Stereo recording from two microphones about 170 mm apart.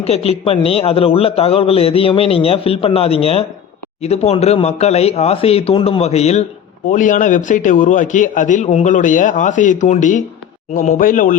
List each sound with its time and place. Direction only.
0.0 s a man's voice: 35° left (ahead or behind)
6.9 s a man's voice: 50° left (ahead or behind)